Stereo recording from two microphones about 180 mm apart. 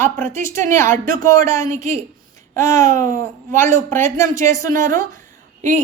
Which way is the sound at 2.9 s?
45° right (ahead or behind).